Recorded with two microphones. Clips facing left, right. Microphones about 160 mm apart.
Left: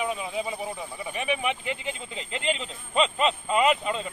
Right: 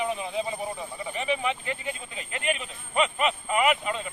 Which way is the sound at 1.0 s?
15° left (ahead or behind).